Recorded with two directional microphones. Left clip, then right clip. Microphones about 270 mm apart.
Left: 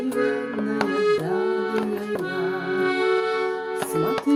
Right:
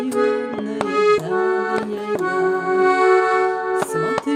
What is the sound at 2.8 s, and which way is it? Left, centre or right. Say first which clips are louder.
Music: right 7 dB; right.